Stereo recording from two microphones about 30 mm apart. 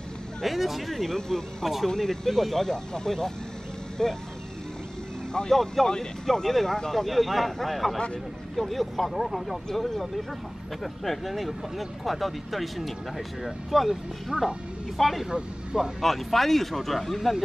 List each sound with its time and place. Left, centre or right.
0.4 s speech: centre
0.9 s speech: centre
2.7 s speech: left
5.5 s speech: centre
9.7 s speech: centre
14.3 s speech: right
15.0 s speech: centre
15.2 s speech: right
16.0 s speech: centre